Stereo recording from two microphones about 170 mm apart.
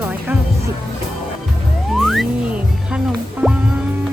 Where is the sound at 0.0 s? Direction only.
10° right (ahead or behind).